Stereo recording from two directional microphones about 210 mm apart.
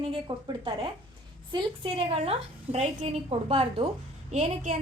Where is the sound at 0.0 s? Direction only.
25° right (ahead or behind).